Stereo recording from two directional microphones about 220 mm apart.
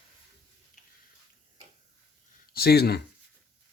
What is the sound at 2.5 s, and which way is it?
Speech, 45° left (ahead or behind).